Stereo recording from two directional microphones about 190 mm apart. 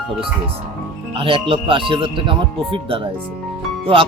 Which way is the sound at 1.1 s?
30° right (ahead or behind).